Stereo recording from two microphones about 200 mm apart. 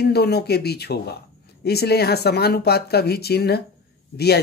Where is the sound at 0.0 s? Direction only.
55° left (ahead or behind).